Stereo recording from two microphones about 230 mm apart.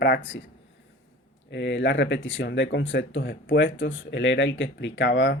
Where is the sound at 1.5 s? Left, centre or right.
Left.